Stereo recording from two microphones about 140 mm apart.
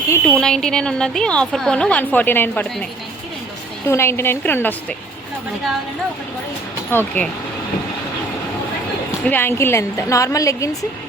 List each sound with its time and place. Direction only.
0.1 s a woman's voice: 10° left (ahead or behind)
3.8 s a woman's voice: 20° left (ahead or behind)
6.9 s a woman's voice: 15° left (ahead or behind)
9.2 s a woman's voice: 15° left (ahead or behind)